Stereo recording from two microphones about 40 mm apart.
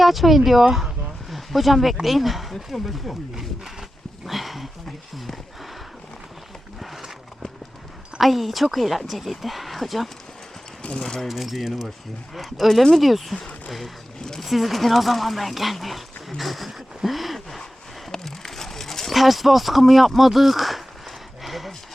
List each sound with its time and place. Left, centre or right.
0.0 s speech: centre
4.3 s a sound: centre
5.1 s speech: centre
6.7 s a sound: centre
8.2 s speech: centre
10.8 s speech: left
11.3 s speech: centre
14.2 s speech: centre
14.4 s speech: centre
18.1 s a sound: centre